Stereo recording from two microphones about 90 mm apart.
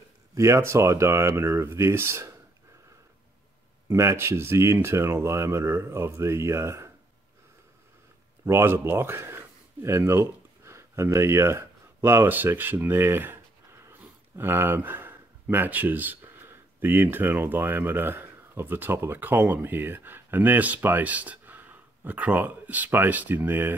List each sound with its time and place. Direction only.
0.3 s speech: 35° right (ahead or behind)
3.9 s speech: 30° right (ahead or behind)
8.5 s speech: 25° right (ahead or behind)